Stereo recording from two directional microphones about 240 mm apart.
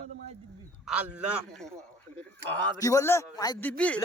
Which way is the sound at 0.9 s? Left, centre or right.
Centre.